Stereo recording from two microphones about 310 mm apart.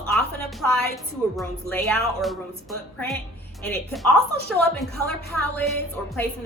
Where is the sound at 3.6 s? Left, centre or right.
Centre.